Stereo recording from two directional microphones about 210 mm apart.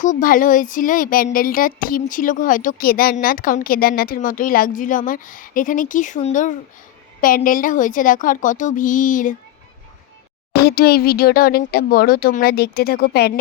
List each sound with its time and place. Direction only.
0.0 s speech: 40° left (ahead or behind)
10.5 s speech: 50° left (ahead or behind)